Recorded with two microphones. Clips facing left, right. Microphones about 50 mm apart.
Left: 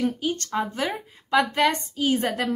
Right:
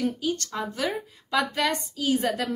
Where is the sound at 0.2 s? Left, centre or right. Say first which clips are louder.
Left 3 dB; left.